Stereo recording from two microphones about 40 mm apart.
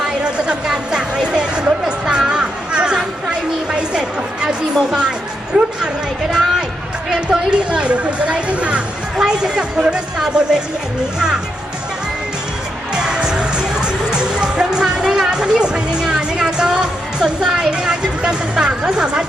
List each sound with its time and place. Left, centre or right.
0.0 s music: right
2.0 s a sound: right
5.5 s speech: centre
6.3 s a sound: centre
7.3 s speech: right
9.1 s speech: centre
12.9 s music: centre